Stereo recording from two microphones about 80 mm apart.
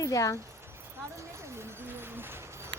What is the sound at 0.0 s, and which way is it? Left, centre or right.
Speech, left.